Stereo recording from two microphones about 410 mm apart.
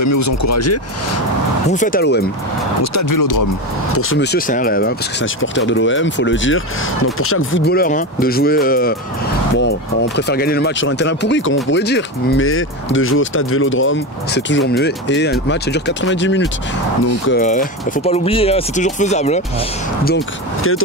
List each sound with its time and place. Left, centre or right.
0.0 s speech: left
1.7 s speech: centre
2.8 s speech: left
3.9 s speech: left
20.1 s speech: left